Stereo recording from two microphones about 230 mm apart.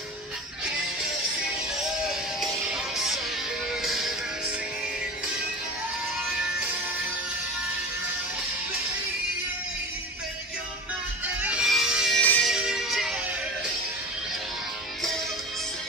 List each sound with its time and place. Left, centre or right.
2.0 s music: centre
11.4 s music: centre